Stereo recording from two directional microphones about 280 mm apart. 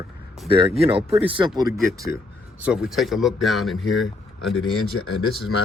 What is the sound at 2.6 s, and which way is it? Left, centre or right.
Speech, centre.